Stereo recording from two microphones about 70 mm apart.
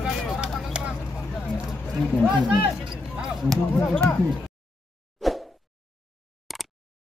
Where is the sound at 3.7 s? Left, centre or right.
Centre.